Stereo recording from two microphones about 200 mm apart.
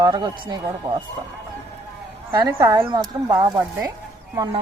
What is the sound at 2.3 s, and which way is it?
Speech, 15° right (ahead or behind).